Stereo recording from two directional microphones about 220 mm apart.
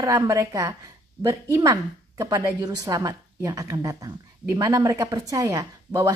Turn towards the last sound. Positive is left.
turn(degrees=-15)  # may be behind; listen again after turning